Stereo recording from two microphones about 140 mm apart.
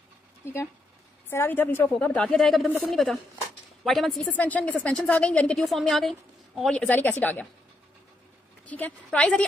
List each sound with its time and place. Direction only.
0.4 s a woman's voice: 15° left (ahead or behind)
8.6 s a woman's voice: 10° left (ahead or behind)